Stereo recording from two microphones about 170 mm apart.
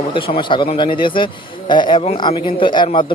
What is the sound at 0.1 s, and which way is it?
Speech, 30° left (ahead or behind).